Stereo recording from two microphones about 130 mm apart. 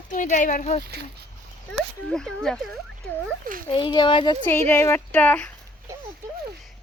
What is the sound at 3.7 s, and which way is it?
Speech, 40° left (ahead or behind).